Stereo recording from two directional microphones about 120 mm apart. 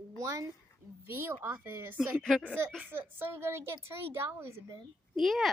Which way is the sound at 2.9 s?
20° right (ahead or behind).